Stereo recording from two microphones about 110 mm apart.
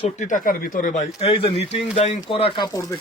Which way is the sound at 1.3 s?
55° left (ahead or behind).